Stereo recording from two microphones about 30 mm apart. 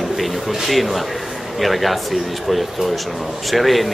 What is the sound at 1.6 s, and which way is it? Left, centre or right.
A man's voice, centre.